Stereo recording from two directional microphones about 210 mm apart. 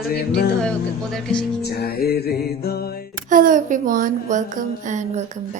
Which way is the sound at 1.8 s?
45° left (ahead or behind).